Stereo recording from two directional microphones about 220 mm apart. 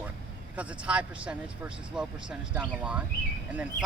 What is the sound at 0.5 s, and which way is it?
A man's voice, 5° right (ahead or behind).